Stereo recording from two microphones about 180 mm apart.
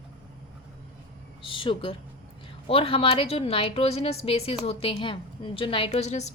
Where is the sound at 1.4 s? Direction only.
30° left (ahead or behind).